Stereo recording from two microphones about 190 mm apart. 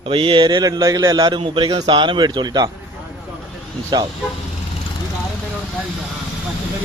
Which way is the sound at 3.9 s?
20° right (ahead or behind).